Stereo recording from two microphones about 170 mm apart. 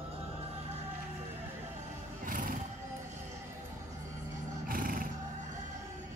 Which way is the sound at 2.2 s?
50° right (ahead or behind).